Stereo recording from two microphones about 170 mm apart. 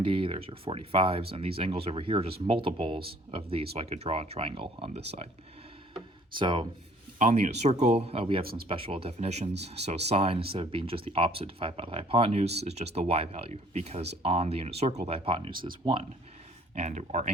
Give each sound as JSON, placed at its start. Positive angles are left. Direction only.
{"t": 0.0, "sound": "speech", "side_deg": -30}
{"t": 6.3, "sound": "speech", "side_deg": -30}
{"t": 7.2, "sound": "speech", "side_deg": -45}
{"t": 15.5, "sound": "speech", "side_deg": -55}
{"t": 15.8, "sound": "speech", "side_deg": -30}
{"t": 16.7, "sound": "speech", "side_deg": -40}